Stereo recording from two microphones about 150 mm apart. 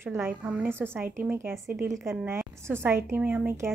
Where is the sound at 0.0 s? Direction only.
15° right (ahead or behind).